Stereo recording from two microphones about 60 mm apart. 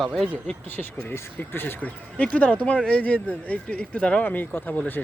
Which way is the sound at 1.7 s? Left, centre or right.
Left.